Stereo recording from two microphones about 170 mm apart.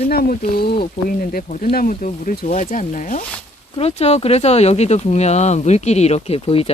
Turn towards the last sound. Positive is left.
turn(degrees=35)  # may be behind; listen again after turning